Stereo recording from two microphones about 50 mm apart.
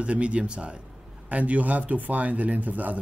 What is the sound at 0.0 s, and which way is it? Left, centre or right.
Speech, right.